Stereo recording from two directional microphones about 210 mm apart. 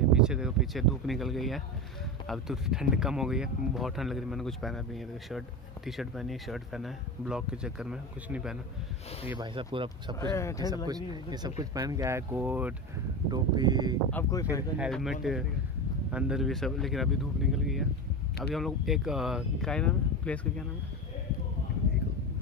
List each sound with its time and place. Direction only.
0.1 s speech: 5° right (ahead or behind)
9.4 s speech: 25° right (ahead or behind)
10.3 s speech: 15° left (ahead or behind)
10.9 s speech: 20° right (ahead or behind)
13.3 s speech: 20° right (ahead or behind)
14.1 s speech: 15° left (ahead or behind)
14.8 s speech: centre (ahead or behind)